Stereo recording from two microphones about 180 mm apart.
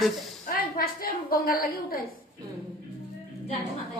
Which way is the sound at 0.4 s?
55° left (ahead or behind).